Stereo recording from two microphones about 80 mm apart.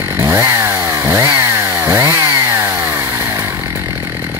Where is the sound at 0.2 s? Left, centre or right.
Right.